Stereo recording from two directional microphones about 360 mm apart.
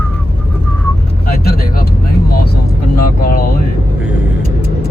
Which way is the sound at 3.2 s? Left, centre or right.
Left.